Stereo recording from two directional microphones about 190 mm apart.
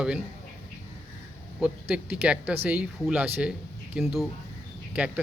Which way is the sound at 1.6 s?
5° right (ahead or behind).